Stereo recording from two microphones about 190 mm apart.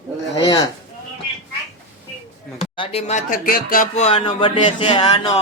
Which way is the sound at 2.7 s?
30° left (ahead or behind).